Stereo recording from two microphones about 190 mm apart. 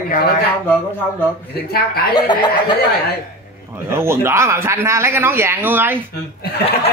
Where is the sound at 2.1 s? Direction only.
25° left (ahead or behind).